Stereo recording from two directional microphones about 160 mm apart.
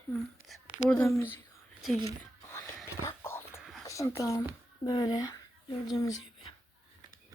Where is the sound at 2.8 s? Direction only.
15° left (ahead or behind).